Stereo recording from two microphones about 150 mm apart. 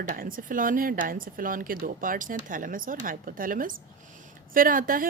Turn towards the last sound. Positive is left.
turn(degrees=-70)  # may be behind; listen again after turning